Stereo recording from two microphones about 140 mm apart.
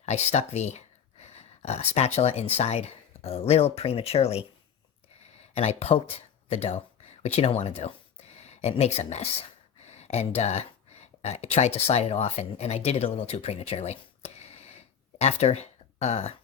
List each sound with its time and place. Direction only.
0.0 s speech: 50° left (ahead or behind)
5.5 s speech: 45° left (ahead or behind)